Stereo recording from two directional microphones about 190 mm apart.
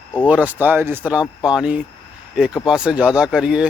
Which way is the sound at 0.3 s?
10° right (ahead or behind).